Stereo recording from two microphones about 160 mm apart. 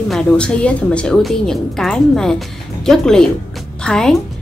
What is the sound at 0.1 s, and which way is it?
A woman's voice, 5° left (ahead or behind).